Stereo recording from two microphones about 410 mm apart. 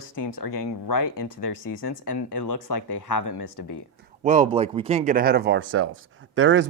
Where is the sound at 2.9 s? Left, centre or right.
Left.